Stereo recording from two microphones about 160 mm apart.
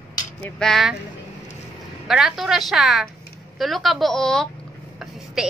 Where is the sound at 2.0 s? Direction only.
5° right (ahead or behind).